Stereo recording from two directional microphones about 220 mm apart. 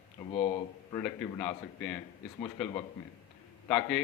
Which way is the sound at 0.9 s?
5° left (ahead or behind).